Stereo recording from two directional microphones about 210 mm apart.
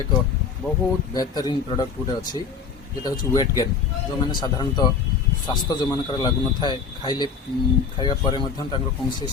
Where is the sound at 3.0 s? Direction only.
15° left (ahead or behind).